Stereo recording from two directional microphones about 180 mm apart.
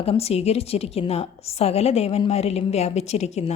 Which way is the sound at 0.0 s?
35° left (ahead or behind).